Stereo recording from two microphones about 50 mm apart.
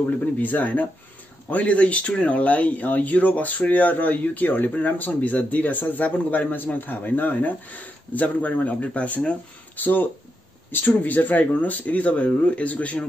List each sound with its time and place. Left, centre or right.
0.4 s speech: left
9.8 s speech: left